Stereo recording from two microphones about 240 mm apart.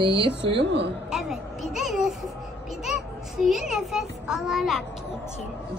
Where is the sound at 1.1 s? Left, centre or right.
Centre.